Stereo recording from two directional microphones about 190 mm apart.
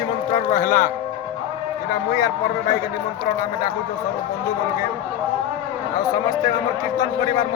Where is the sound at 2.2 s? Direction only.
20° left (ahead or behind).